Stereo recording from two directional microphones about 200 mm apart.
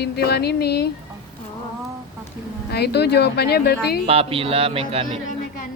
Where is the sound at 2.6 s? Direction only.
55° left (ahead or behind).